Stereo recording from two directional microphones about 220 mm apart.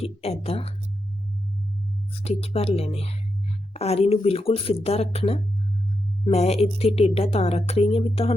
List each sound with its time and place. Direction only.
0.0 s a woman's voice: 25° left (ahead or behind)
2.1 s a woman's voice: 30° left (ahead or behind)